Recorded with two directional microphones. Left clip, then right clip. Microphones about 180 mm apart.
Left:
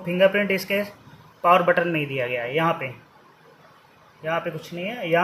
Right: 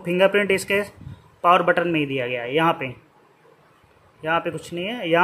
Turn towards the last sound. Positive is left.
turn(degrees=-40)  # may be behind; listen again after turning